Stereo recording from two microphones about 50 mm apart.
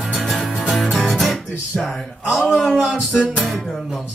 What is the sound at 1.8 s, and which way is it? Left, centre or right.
Speech, centre.